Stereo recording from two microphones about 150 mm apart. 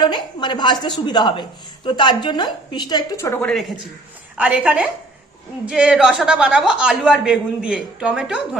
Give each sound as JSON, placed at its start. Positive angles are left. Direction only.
{"t": 0.0, "sound": "a woman's voice", "side_deg": 30}
{"t": 3.4, "sound": "speech", "side_deg": 0}
{"t": 4.4, "sound": "a woman's voice", "side_deg": -10}